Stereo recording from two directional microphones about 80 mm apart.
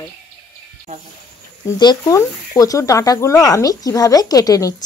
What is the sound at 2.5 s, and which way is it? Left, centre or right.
Speech, left.